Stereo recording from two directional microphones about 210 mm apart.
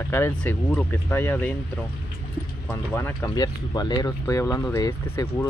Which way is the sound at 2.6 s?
10° left (ahead or behind).